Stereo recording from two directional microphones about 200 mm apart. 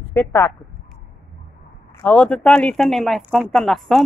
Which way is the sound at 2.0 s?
5° left (ahead or behind).